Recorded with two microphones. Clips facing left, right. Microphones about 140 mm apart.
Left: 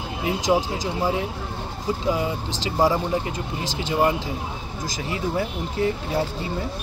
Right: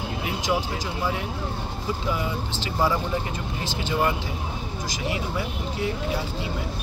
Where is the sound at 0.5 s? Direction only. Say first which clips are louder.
Left 5 dB; 30° left (ahead or behind).